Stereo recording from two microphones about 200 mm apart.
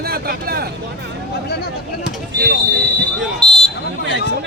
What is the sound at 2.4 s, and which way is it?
Speech, 60° right (ahead or behind).